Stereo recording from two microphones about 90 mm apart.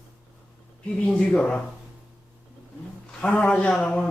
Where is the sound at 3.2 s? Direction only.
10° left (ahead or behind).